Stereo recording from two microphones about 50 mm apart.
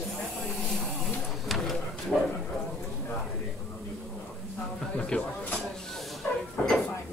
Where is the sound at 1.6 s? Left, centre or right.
Centre.